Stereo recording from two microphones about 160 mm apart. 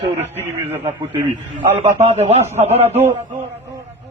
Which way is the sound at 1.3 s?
30° right (ahead or behind).